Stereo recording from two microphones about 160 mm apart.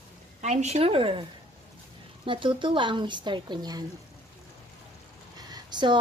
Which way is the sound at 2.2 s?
30° right (ahead or behind).